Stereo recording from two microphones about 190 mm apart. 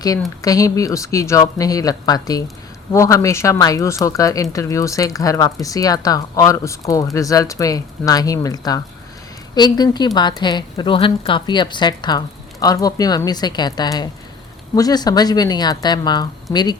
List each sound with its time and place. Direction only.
0.4 s a woman's voice: 20° left (ahead or behind)